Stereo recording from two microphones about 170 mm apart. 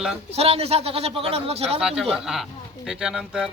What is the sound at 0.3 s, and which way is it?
A man's voice, 35° right (ahead or behind).